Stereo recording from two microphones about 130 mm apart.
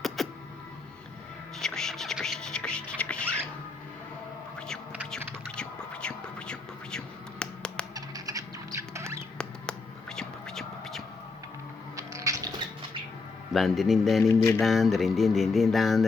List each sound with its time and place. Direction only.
0.2 s music: centre (ahead or behind)
1.5 s music: 5° left (ahead or behind)
5.5 s whispering: 10° left (ahead or behind)
7.9 s rodents: 25° right (ahead or behind)
9.4 s a sound: 5° left (ahead or behind)
11.9 s biting: 25° right (ahead or behind)
13.5 s a sound: centre (ahead or behind)